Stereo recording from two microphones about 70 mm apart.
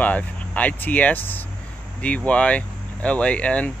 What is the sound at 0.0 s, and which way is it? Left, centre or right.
Speech, left.